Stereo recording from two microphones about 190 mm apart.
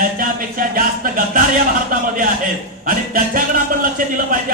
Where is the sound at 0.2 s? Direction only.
45° right (ahead or behind).